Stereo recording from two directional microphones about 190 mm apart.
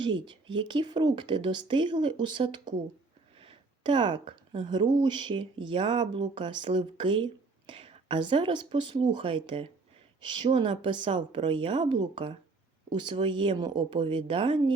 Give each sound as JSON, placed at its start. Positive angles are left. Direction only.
{"t": 0.0, "sound": "speech", "side_deg": -25}